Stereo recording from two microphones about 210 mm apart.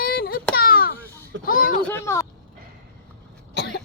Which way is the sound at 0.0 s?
45° left (ahead or behind).